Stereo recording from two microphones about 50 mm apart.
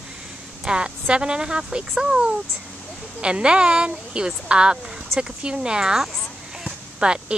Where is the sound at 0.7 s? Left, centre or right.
Centre.